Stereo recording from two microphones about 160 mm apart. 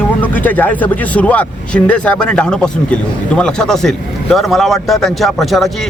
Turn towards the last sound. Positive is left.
turn(degrees=0)  # may be behind; listen again after turning